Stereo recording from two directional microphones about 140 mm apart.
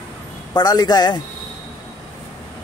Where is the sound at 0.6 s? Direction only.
30° left (ahead or behind).